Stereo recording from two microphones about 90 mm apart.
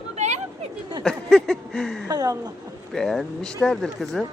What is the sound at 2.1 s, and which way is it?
Speech, 45° right (ahead or behind).